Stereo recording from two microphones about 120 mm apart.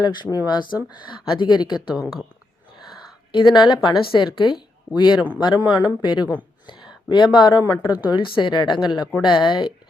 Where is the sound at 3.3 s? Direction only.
40° left (ahead or behind).